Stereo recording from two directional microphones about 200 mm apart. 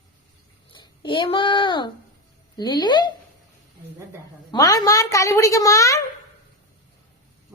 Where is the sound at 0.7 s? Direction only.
25° left (ahead or behind).